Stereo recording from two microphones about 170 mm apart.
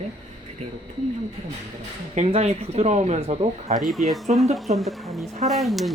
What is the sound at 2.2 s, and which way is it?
Speech, 40° right (ahead or behind).